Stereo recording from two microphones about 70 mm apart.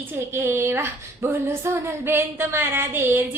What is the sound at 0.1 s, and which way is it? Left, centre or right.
A woman's voice, right.